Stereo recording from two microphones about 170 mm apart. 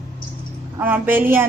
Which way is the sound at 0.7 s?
10° right (ahead or behind).